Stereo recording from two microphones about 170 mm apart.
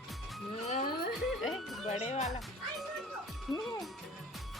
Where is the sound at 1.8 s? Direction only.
40° left (ahead or behind).